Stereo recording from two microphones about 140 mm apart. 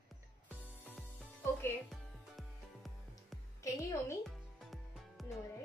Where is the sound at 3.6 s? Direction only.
20° left (ahead or behind).